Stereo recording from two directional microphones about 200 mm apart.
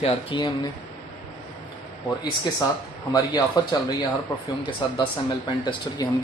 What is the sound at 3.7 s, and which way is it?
Speech, 20° left (ahead or behind).